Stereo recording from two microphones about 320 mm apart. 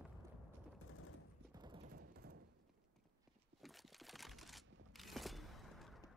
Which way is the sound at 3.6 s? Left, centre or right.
Centre.